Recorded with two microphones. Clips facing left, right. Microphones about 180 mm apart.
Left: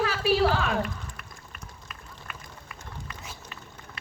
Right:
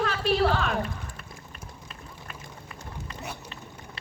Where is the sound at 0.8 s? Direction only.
30° right (ahead or behind).